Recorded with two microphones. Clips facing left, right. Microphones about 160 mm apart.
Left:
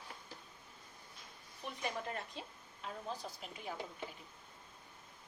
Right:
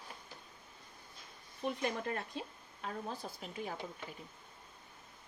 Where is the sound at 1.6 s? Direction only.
55° right (ahead or behind).